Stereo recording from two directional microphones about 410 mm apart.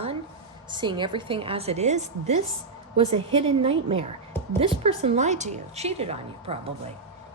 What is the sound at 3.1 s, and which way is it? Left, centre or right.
A woman's voice, centre.